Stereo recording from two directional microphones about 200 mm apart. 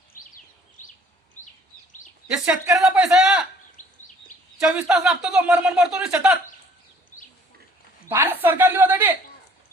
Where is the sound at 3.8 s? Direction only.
40° left (ahead or behind).